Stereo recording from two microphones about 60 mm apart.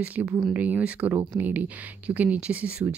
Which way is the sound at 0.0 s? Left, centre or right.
Right.